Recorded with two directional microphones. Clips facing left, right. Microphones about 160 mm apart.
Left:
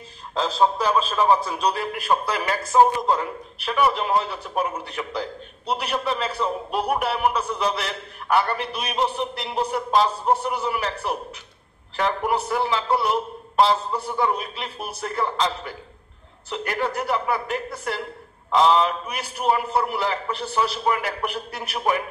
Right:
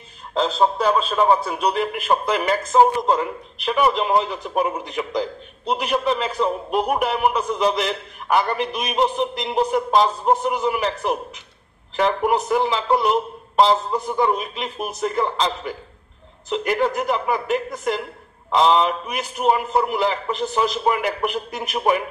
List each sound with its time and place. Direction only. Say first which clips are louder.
1.1 s a man's voice: right 2 dB; 20° right (ahead or behind)